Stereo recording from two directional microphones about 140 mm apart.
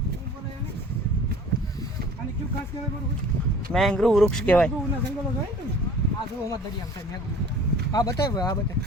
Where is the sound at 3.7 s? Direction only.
5° left (ahead or behind).